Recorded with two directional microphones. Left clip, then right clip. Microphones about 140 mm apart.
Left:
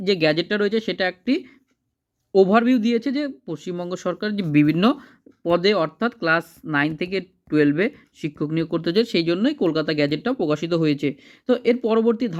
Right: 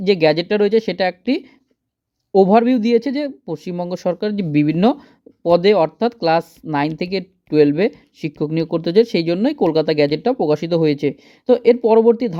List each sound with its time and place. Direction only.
0.0 s speech: 25° right (ahead or behind)